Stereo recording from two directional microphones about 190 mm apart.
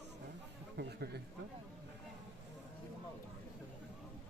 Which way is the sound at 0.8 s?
60° right (ahead or behind).